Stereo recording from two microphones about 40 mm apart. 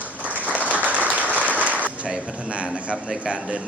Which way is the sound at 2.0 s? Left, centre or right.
Right.